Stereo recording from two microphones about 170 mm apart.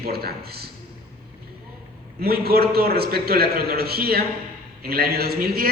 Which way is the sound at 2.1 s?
65° right (ahead or behind).